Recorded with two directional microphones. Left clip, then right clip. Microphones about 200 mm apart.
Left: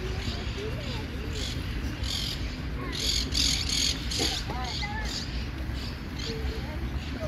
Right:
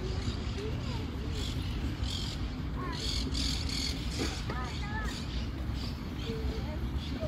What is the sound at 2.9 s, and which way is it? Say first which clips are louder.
Vehicle: left 9 dB; 55° right (ahead or behind).